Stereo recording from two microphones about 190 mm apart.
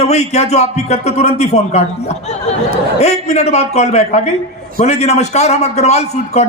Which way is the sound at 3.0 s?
35° left (ahead or behind).